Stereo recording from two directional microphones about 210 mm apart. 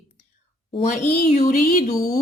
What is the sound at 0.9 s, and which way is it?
Speech, 35° left (ahead or behind).